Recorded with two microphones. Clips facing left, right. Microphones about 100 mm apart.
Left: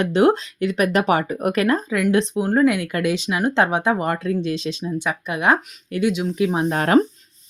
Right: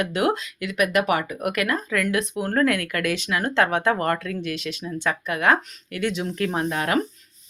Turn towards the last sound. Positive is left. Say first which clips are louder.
# left 7 dB
turn(degrees=35)  # may be behind; listen again after turning